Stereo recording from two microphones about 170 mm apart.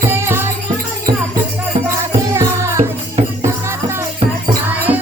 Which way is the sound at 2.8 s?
35° right (ahead or behind).